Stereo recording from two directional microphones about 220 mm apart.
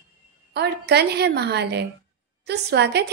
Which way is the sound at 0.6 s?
50° right (ahead or behind).